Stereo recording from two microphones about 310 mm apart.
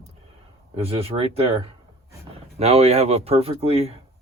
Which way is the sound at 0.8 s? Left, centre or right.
Centre.